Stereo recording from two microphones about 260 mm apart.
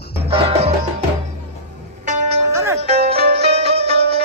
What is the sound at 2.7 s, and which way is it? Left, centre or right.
Music, right.